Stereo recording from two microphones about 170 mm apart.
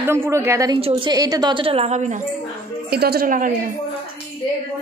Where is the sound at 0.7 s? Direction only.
30° right (ahead or behind).